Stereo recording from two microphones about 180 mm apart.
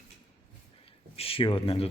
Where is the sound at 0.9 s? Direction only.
30° left (ahead or behind).